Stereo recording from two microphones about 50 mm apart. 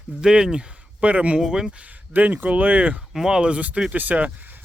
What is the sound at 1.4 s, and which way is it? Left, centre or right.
Speech, centre.